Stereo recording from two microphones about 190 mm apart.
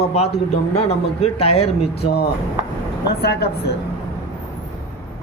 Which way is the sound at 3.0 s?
60° left (ahead or behind).